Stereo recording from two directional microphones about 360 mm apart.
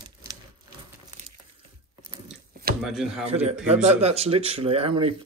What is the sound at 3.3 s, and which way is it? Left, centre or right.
Speech, centre.